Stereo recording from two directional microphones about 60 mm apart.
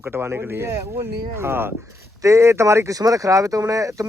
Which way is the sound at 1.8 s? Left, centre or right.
Right.